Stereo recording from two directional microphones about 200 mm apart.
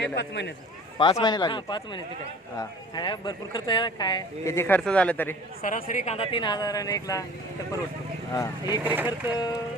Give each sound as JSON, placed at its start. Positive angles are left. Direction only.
{"t": 0.0, "sound": "speech", "side_deg": 60}
{"t": 0.9, "sound": "speech", "side_deg": 25}
{"t": 5.6, "sound": "speech", "side_deg": 40}
{"t": 8.3, "sound": "speech", "side_deg": 20}
{"t": 8.8, "sound": "speech", "side_deg": -10}